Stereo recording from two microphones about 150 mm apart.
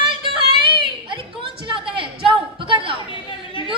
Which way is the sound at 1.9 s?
35° right (ahead or behind).